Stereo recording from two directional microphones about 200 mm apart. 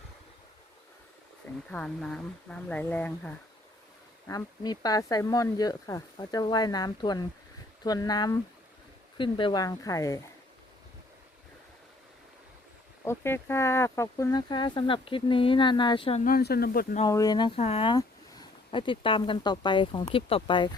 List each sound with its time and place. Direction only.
1.7 s speech: 5° left (ahead or behind)
4.3 s speech: 20° left (ahead or behind)
13.1 s speech: 10° left (ahead or behind)
16.2 s speech: 50° left (ahead or behind)
17.1 s speech: 20° left (ahead or behind)